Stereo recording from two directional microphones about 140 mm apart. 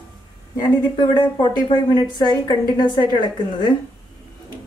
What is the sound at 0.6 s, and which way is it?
A woman's voice, 30° left (ahead or behind).